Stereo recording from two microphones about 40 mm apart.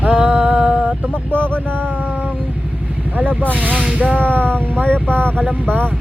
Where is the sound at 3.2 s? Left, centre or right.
Right.